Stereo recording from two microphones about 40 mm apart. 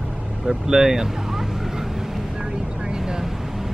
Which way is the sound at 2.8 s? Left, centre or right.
Centre.